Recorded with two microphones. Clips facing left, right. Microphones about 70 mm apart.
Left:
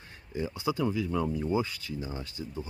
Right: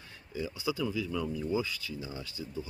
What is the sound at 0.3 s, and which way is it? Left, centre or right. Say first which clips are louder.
Speech: left 3 dB; left.